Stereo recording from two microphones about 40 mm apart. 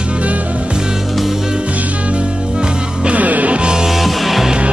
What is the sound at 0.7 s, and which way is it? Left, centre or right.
Music, centre.